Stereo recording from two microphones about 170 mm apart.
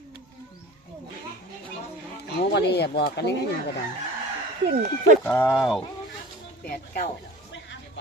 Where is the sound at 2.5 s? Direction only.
80° left.